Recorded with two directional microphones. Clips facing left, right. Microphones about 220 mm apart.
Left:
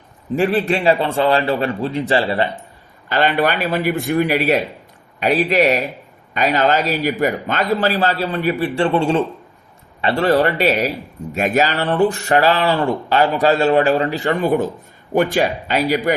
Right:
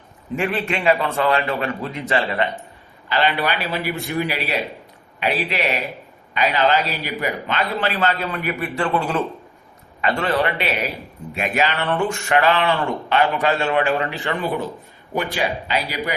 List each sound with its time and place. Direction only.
0.3 s speech: 35° left (ahead or behind)
3.1 s a man's voice: 45° left (ahead or behind)